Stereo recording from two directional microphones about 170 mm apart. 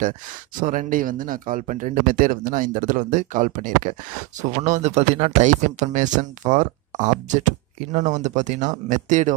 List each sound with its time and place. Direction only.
0.6 s speech: 50° right (ahead or behind)